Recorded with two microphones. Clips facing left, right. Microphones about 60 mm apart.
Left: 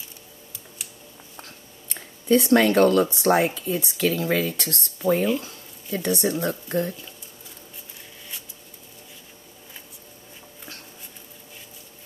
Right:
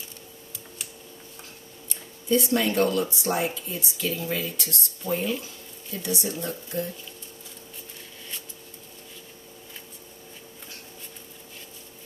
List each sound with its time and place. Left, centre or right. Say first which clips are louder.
1.9 s speech: left 5 dB; left
5.9 s speech: left 6 dB; left